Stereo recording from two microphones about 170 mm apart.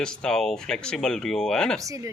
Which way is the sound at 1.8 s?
20° right (ahead or behind).